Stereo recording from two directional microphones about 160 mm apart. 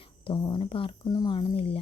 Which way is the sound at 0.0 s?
30° left (ahead or behind).